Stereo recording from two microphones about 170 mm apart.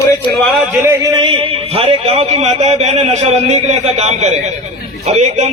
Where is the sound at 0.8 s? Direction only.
15° right (ahead or behind).